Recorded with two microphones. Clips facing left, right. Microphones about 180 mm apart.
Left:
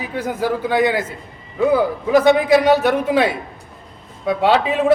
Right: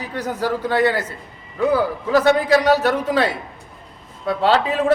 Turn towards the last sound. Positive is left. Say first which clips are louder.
# left 2 dB
turn(degrees=10)  # may be behind; listen again after turning